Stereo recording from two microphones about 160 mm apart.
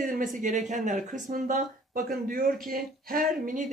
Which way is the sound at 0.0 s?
55° right (ahead or behind).